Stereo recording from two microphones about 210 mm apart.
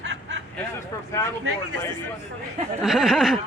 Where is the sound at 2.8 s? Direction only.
Centre (ahead or behind).